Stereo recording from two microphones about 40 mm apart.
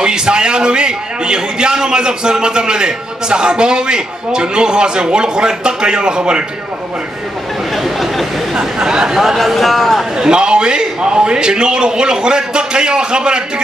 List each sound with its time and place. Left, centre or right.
0.0 s a man's voice: right
7.7 s a sound: centre
8.5 s speech: centre
9.2 s speech: centre
10.1 s a man's voice: centre